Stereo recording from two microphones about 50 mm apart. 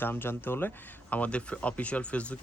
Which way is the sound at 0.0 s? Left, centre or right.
Left.